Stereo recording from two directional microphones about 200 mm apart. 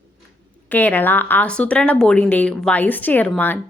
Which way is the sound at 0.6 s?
10° left (ahead or behind).